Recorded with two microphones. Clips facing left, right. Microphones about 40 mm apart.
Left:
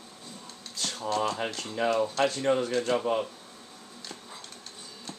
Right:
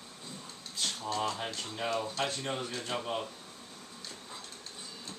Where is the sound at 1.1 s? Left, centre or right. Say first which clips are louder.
Left 7 dB; left.